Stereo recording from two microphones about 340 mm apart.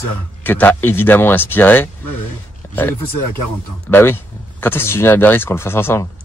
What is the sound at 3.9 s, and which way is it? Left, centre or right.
Speech, centre.